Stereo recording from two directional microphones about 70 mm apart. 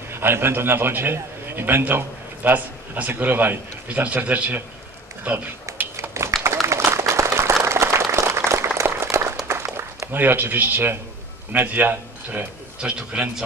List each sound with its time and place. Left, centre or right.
0.1 s a man's voice: right
5.9 s a sound: right
6.4 s applause: right
9.5 s a sound: right
11.5 s speech: right
12.8 s a man's voice: centre